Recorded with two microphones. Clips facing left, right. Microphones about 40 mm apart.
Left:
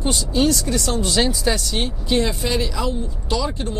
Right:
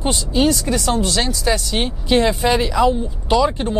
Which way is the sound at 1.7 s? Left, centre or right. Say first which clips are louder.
Right 4 dB; right.